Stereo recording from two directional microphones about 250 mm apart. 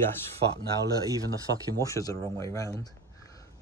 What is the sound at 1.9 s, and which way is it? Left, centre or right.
Speech, centre.